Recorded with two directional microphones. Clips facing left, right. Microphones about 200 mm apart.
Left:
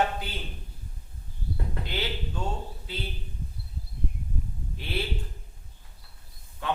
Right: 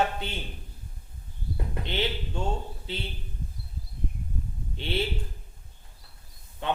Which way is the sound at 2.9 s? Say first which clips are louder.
Right 2 dB; 25° right (ahead or behind).